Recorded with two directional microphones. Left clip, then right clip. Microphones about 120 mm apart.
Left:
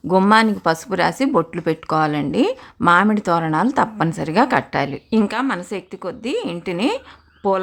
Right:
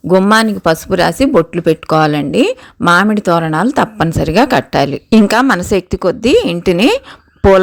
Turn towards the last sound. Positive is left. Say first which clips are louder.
# right 11 dB
turn(degrees=-50)  # may be behind; listen again after turning